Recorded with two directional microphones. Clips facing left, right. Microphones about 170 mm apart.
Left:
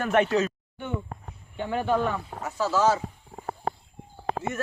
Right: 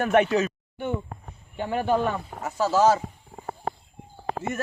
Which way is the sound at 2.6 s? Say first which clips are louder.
Right 3 dB; 40° right (ahead or behind).